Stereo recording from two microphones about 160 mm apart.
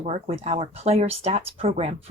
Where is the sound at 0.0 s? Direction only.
40° right (ahead or behind).